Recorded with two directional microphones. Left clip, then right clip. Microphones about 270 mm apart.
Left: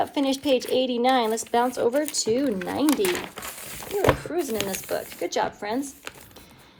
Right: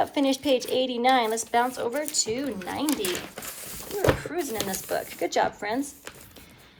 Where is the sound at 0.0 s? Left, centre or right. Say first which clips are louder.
Even; centre.